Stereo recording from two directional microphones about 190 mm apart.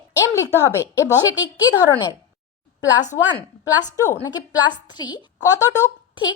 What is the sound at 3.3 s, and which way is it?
A woman's voice, 20° left (ahead or behind).